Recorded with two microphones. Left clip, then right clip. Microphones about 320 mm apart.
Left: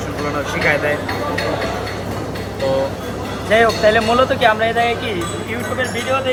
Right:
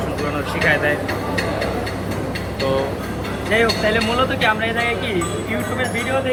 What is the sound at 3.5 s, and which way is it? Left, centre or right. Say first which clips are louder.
Speech: left 5 dB; left.